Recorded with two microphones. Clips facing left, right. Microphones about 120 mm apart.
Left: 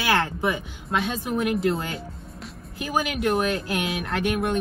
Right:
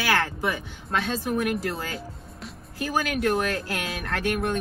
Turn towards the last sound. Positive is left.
turn(degrees=20)  # may be behind; listen again after turning